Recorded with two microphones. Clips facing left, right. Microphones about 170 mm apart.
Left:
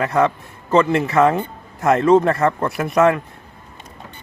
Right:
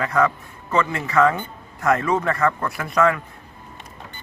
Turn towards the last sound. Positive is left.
turn(degrees=25)  # may be behind; listen again after turning